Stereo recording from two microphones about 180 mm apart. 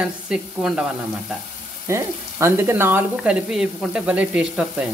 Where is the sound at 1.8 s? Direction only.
15° right (ahead or behind).